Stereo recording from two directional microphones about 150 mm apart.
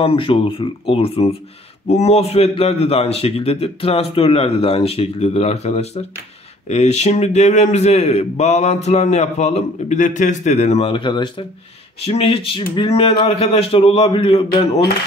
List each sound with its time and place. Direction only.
0.0 s a man's voice: 35° left (ahead or behind)